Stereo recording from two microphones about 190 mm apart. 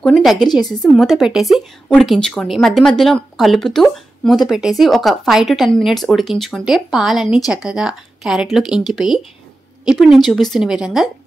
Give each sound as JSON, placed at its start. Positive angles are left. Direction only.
{"t": 0.0, "sound": "a woman's voice", "side_deg": 0}
{"t": 0.4, "sound": "a woman's voice", "side_deg": 20}
{"t": 0.9, "sound": "a woman's voice", "side_deg": 0}